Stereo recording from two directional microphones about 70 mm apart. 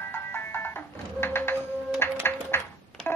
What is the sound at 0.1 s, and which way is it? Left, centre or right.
Music, left.